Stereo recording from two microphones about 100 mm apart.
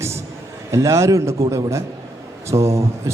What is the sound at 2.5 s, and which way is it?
Speech, 30° right (ahead or behind).